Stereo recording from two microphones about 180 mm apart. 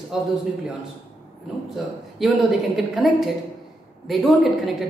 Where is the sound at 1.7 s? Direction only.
Centre (ahead or behind).